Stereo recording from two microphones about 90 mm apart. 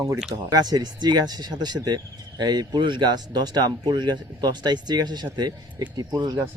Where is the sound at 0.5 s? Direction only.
50° right (ahead or behind).